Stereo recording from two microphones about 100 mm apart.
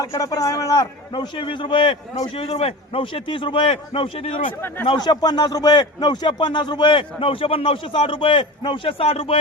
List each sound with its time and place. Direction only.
0.0 s a man's voice: 35° left (ahead or behind); by 4.5 s 65° left (ahead or behind)
4.9 s a man's voice: 45° left (ahead or behind); by 9.4 s 70° left (ahead or behind)